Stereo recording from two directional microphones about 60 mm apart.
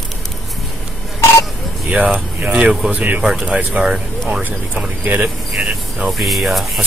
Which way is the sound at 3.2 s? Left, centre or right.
Centre.